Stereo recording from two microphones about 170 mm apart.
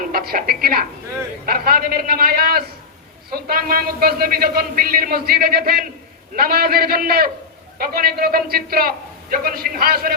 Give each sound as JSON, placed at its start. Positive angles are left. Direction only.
{"t": 0.1, "sound": "a woman's voice", "side_deg": -60}